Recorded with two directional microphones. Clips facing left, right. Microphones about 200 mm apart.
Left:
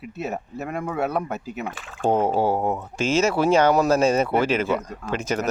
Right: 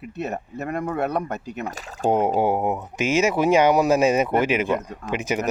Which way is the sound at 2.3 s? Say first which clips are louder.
Right 1 dB; 20° right (ahead or behind).